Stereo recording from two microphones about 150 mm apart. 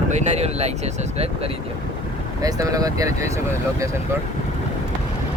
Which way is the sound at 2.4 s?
25° right (ahead or behind).